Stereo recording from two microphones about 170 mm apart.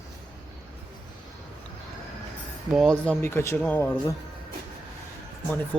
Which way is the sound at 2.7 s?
Centre (ahead or behind).